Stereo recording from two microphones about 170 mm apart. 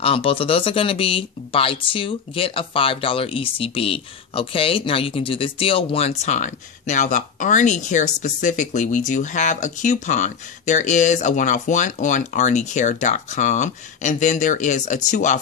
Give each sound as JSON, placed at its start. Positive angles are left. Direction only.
{"t": 0.0, "sound": "speech", "side_deg": 35}